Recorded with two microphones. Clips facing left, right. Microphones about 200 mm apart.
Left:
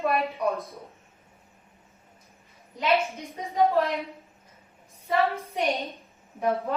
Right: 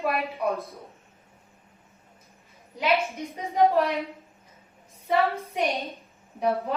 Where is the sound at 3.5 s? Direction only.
15° right (ahead or behind).